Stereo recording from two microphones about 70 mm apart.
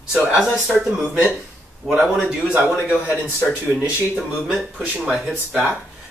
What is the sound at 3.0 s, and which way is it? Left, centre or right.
Speech, left.